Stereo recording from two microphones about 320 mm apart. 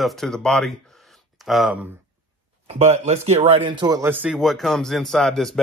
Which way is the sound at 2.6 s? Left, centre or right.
Centre.